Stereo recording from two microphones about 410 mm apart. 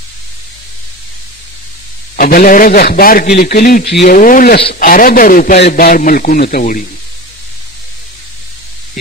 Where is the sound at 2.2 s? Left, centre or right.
Left.